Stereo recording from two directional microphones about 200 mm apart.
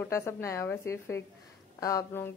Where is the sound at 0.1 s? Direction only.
15° left (ahead or behind).